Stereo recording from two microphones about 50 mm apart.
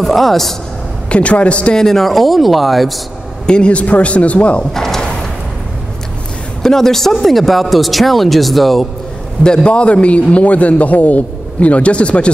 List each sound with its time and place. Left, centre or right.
0.0 s speech: centre
1.0 s a man's voice: left
1.8 s speech: centre
3.4 s a man's voice: centre
4.7 s drawer open or close: centre
6.6 s speech: centre
9.4 s a man's voice: centre